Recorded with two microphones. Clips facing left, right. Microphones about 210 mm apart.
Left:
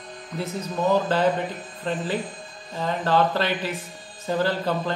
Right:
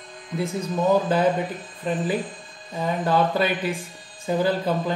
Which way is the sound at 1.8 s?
10° right (ahead or behind).